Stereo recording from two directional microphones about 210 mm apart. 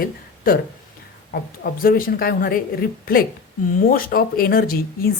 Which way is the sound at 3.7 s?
45° left (ahead or behind).